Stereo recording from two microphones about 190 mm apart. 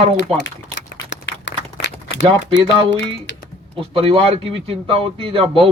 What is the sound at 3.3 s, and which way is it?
Music, 75° left (ahead or behind).